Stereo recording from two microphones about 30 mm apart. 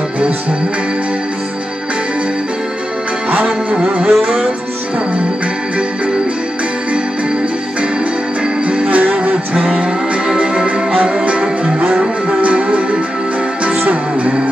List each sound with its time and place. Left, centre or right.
3.4 s music: right
4.1 s music: right
8.6 s music: right
9.5 s music: right
9.8 s music: right
12.3 s music: right